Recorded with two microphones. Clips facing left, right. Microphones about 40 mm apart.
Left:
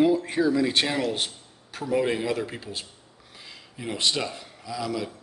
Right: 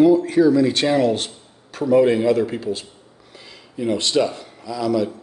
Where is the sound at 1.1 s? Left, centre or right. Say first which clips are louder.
Right 3 dB; centre.